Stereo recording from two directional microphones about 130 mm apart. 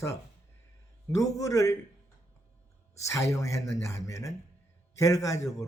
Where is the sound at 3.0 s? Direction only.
25° left (ahead or behind).